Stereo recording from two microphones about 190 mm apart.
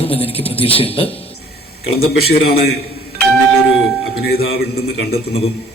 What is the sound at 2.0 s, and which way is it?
Speech, 55° left (ahead or behind).